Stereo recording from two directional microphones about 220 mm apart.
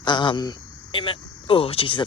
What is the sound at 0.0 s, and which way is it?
Speech, 20° left (ahead or behind).